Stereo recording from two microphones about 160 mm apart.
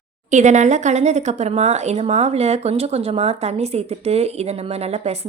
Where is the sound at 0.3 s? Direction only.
50° right (ahead or behind).